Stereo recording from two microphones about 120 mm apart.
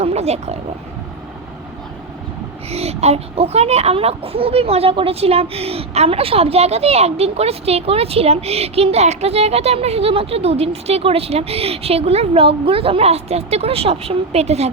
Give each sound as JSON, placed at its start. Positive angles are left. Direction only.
{"t": 0.0, "sound": "speech", "side_deg": -65}
{"t": 2.6, "sound": "a child's voice", "side_deg": -60}